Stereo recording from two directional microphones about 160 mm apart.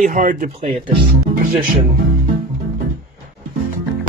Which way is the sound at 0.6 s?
40° right (ahead or behind).